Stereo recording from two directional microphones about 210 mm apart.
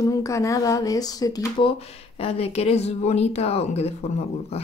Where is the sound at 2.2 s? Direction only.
30° left (ahead or behind).